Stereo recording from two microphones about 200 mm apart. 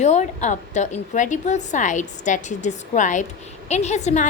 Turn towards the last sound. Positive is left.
turn(degrees=35)  # may be behind; listen again after turning